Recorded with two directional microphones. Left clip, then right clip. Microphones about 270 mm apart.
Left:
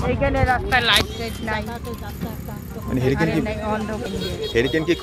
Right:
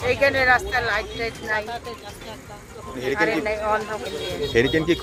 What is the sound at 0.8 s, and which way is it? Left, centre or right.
Speech, centre.